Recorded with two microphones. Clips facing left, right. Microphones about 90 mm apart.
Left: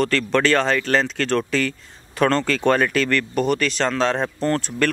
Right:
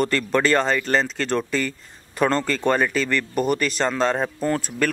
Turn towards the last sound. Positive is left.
turn(degrees=-5)  # may be behind; listen again after turning